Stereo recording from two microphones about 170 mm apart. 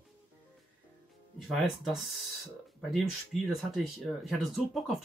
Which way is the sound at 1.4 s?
Centre (ahead or behind).